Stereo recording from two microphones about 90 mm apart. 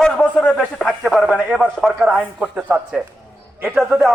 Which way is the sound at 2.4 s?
15° right (ahead or behind).